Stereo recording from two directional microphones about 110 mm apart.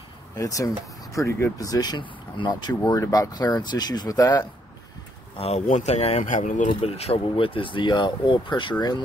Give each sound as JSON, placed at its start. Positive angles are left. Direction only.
{"t": 0.4, "sound": "speech", "side_deg": 30}
{"t": 5.4, "sound": "speech", "side_deg": 80}
{"t": 6.7, "sound": "speech", "side_deg": 60}